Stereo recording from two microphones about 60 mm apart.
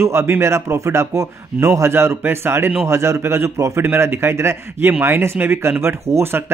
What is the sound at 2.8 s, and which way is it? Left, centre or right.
Speech, right.